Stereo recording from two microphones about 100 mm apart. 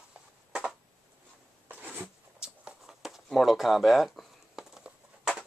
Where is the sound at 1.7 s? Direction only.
20° right (ahead or behind).